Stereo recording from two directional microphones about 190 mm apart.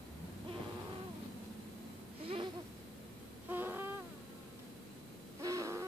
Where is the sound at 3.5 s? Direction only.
10° right (ahead or behind).